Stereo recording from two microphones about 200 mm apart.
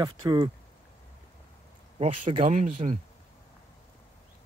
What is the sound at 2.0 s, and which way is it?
Speech, 30° right (ahead or behind).